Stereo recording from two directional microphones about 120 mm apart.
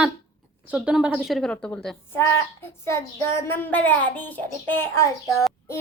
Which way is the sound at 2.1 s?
20° left (ahead or behind).